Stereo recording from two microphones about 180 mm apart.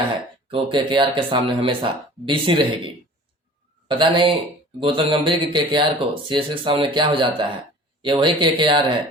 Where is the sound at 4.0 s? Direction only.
25° right (ahead or behind).